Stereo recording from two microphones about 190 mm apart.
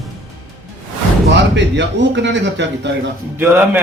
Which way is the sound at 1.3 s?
70° right (ahead or behind).